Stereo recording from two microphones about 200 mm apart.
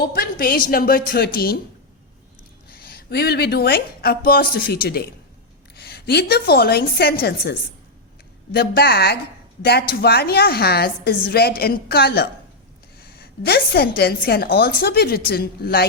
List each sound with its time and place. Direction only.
0.0 s a woman's voice: 45° left (ahead or behind)
2.6 s a woman's voice: 50° left (ahead or behind)
8.5 s a woman's voice: 50° left (ahead or behind)